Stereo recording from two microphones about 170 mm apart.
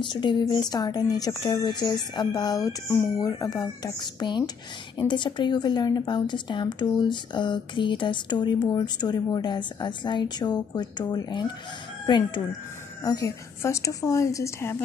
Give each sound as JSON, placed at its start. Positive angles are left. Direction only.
{"t": 0.0, "sound": "a woman's voice", "side_deg": 25}